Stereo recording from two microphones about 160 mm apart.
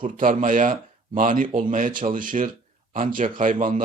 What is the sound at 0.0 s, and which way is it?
A man's voice, 60° right (ahead or behind).